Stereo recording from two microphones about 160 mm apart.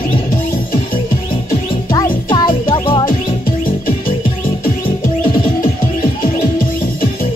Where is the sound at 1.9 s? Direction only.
30° left (ahead or behind).